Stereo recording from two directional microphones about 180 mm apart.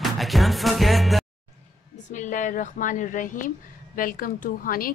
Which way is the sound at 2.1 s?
45° left (ahead or behind).